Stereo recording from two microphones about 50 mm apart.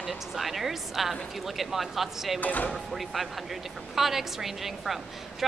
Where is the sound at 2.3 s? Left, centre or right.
Left.